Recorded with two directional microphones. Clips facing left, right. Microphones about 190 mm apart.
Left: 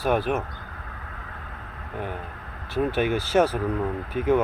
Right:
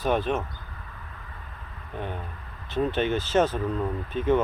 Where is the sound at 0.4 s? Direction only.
65° left (ahead or behind).